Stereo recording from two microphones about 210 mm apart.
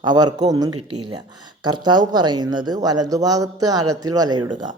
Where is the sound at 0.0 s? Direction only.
20° right (ahead or behind).